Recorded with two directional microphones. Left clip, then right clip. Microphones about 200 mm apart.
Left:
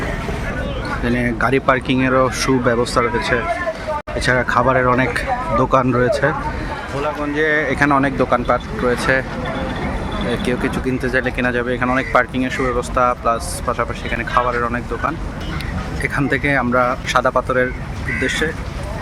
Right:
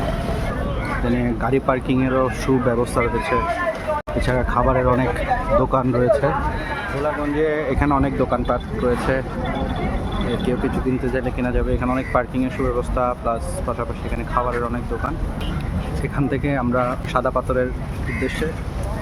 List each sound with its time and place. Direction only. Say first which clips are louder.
1.0 s speech: left 6 dB; 5° left (ahead or behind)
10.4 s speech: left 2 dB; 10° left (ahead or behind)
16.0 s speech: left 6 dB; 5° left (ahead or behind)